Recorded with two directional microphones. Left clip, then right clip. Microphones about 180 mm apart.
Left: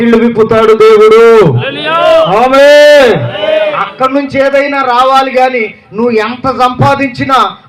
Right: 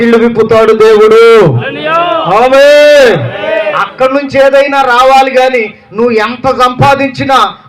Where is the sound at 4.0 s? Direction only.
30° right (ahead or behind).